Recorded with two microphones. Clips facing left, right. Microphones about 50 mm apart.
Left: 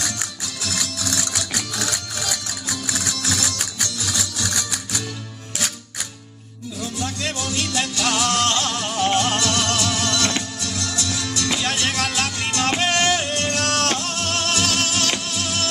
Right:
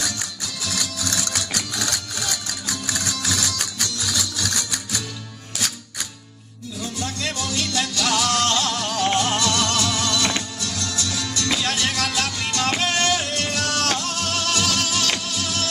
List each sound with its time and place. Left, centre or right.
1.1 s music: centre
7.2 s music: left
9.0 s music: centre
9.4 s music: left
11.1 s music: left
13.3 s music: left